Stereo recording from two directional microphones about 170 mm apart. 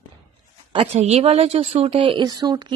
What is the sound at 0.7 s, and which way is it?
A woman's voice, 35° right (ahead or behind).